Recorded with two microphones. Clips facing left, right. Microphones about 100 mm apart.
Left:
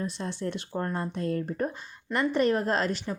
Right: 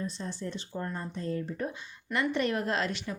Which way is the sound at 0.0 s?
70° left (ahead or behind).